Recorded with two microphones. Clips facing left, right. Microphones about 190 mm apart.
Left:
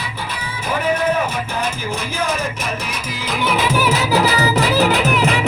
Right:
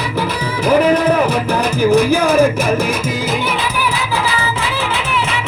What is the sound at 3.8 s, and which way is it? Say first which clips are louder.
Music: left 3 dB; 40° left (ahead or behind).